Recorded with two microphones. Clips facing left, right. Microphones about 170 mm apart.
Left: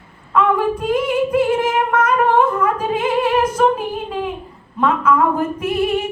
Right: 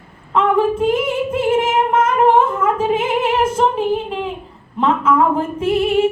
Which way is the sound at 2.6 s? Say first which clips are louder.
Right 2 dB; 25° right (ahead or behind).